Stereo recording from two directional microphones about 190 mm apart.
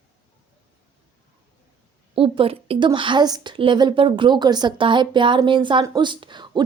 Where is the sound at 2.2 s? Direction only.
30° right (ahead or behind).